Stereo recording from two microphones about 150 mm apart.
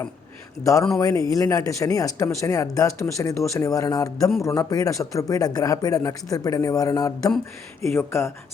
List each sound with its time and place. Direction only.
0.6 s speech: 20° left (ahead or behind)